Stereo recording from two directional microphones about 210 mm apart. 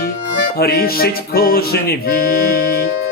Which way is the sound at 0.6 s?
45° left (ahead or behind).